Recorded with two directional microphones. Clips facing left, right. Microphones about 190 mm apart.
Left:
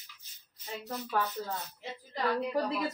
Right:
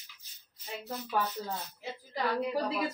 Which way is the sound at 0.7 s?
Centre (ahead or behind).